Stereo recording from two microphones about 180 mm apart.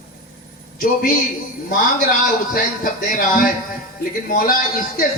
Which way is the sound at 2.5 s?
50° left (ahead or behind).